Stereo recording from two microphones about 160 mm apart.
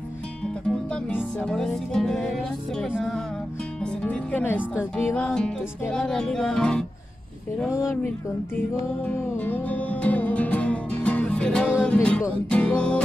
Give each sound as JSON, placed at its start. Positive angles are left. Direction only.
{"t": 0.7, "sound": "music", "side_deg": 5}
{"t": 3.8, "sound": "speech", "side_deg": 5}
{"t": 5.1, "sound": "music", "side_deg": 5}
{"t": 7.6, "sound": "speech", "side_deg": 20}
{"t": 9.0, "sound": "music", "side_deg": 10}